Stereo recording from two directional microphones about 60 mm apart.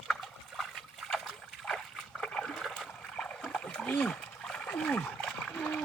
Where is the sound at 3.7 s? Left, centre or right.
Centre.